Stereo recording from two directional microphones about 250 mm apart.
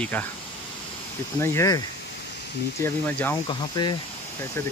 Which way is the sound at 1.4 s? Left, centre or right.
Centre.